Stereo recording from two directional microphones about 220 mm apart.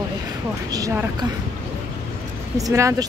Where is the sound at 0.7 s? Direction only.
15° right (ahead or behind).